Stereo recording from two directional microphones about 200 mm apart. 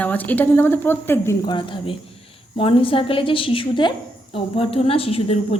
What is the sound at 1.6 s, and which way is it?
A woman's voice, 25° left (ahead or behind).